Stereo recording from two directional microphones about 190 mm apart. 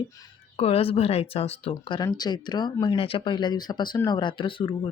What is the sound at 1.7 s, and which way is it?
Speech, 20° left (ahead or behind).